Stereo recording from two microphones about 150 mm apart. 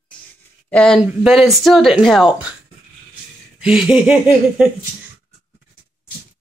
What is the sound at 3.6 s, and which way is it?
Speech, 5° right (ahead or behind).